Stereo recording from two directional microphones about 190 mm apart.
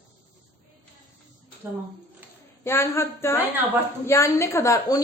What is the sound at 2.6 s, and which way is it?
A woman's voice, 15° left (ahead or behind).